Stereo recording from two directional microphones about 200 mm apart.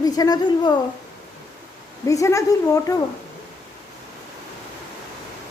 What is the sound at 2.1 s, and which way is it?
Speech, 15° left (ahead or behind).